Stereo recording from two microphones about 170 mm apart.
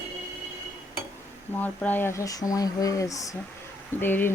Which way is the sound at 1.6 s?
10° left (ahead or behind).